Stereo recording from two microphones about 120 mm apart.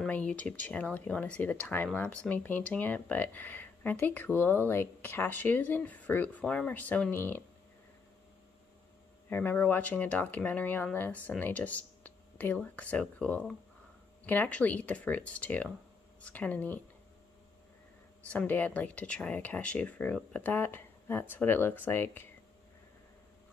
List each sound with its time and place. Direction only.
0.0 s speech: 10° left (ahead or behind)
9.3 s speech: 15° left (ahead or behind)
18.3 s speech: 15° left (ahead or behind)